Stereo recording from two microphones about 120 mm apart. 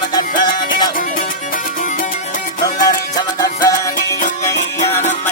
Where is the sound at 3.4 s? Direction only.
30° left (ahead or behind).